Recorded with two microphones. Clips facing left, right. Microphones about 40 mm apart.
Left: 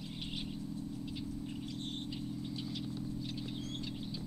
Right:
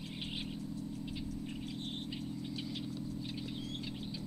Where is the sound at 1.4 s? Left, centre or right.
Centre.